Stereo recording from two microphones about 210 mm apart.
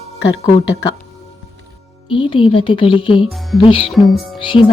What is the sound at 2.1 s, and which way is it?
A woman's voice, 25° left (ahead or behind).